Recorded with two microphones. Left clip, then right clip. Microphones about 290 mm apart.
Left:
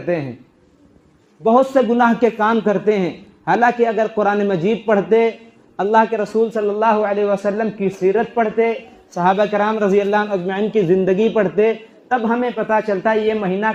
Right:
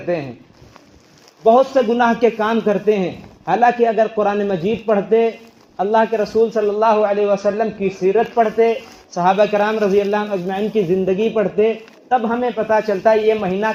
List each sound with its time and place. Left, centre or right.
1.5 s a man's voice: left